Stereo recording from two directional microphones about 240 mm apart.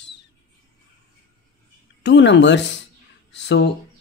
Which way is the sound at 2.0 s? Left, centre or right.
Left.